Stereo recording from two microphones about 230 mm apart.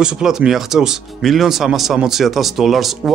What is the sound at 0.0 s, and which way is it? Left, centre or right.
Speech, centre.